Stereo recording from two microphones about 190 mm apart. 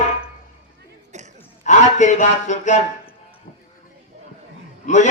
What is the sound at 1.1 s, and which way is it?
Gasp, 40° right (ahead or behind).